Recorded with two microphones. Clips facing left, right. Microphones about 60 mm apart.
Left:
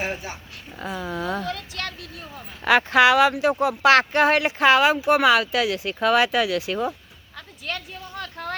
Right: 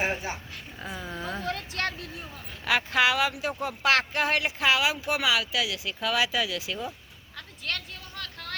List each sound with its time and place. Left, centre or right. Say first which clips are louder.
0.0 s a woman's voice: even; right
0.9 s speech: left 7 dB; left
1.5 s speech: even; right
2.6 s speech: left 8 dB; left
7.3 s a sound: left 2 dB; centre; by 8.5 s left